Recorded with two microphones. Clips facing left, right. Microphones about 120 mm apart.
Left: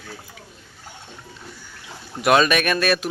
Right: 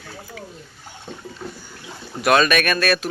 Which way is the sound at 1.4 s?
85° right.